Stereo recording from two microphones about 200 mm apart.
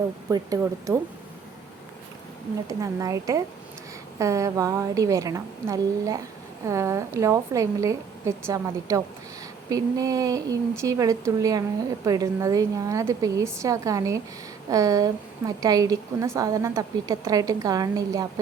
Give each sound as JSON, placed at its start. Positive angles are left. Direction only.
{"t": 0.3, "sound": "a woman's voice", "side_deg": -15}
{"t": 2.6, "sound": "a woman's voice", "side_deg": -15}